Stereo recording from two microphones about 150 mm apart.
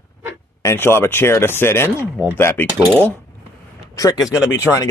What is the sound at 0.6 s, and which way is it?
Speech, 15° left (ahead or behind).